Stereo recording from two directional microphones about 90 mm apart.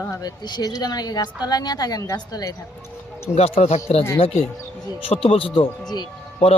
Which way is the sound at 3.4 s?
90° left.